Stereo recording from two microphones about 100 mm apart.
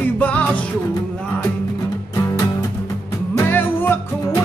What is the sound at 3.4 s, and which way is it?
Music, 20° left (ahead or behind).